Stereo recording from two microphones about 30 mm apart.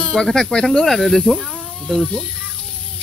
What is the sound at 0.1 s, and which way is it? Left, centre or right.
Speech, left.